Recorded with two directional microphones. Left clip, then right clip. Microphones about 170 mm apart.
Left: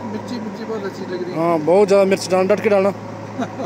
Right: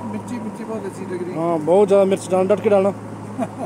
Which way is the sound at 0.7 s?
20° left (ahead or behind).